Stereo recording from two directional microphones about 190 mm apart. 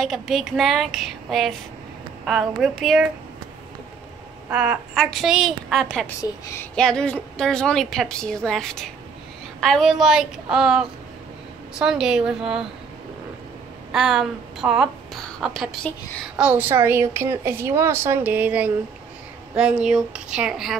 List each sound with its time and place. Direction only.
0.0 s a woman's voice: centre (ahead or behind)
4.5 s a woman's voice: 5° right (ahead or behind)
6.2 s a woman's voice: 15° left (ahead or behind)
6.7 s a woman's voice: 5° left (ahead or behind)
13.9 s a woman's voice: 5° right (ahead or behind)